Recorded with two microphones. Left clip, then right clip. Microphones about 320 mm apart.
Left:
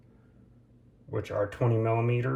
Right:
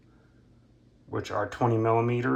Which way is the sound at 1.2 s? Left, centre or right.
Centre.